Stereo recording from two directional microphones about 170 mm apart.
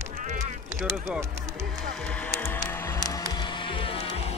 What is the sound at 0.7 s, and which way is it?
Speech, 15° right (ahead or behind).